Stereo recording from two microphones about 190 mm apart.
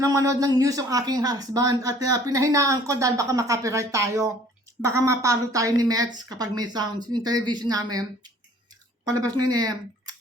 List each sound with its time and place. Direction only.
0.0 s speech: 15° right (ahead or behind)